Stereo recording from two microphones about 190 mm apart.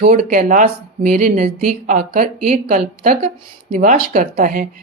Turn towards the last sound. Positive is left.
turn(degrees=-45)  # may be behind; listen again after turning